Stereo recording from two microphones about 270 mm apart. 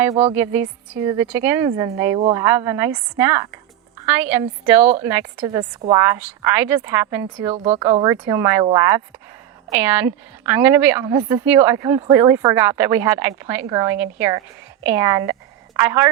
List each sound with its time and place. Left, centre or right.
0.3 s a woman's voice: centre
2.1 s speech: right
2.4 s a woman's voice: centre
7.5 s speech: right
8.0 s a woman's voice: centre